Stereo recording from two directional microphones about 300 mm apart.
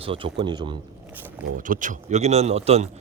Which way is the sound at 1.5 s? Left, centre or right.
Right.